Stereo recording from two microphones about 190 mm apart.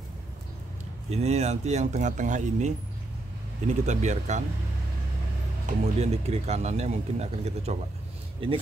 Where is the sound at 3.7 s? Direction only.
40° right (ahead or behind).